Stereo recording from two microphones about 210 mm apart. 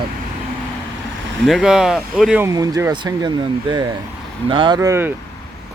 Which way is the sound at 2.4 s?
15° right (ahead or behind).